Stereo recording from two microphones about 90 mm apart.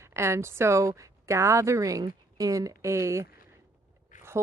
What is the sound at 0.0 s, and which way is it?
Speech, 30° right (ahead or behind).